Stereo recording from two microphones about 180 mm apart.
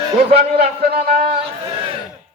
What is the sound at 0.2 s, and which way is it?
A man's voice, 35° right (ahead or behind).